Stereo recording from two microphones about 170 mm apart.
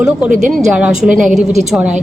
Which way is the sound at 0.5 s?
5° right (ahead or behind).